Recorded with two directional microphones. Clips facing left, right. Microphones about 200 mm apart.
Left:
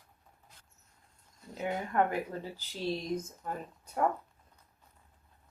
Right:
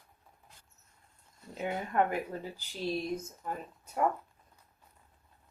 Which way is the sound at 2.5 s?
15° right (ahead or behind).